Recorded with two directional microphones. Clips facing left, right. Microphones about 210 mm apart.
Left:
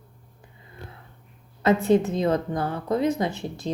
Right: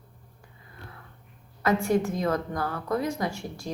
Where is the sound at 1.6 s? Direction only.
20° left (ahead or behind).